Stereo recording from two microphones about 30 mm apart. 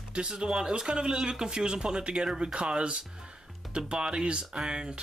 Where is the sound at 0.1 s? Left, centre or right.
Right.